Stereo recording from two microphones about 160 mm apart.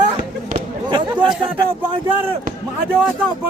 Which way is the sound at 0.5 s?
30° right (ahead or behind).